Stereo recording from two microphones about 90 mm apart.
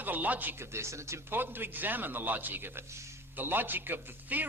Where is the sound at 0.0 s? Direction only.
20° right (ahead or behind).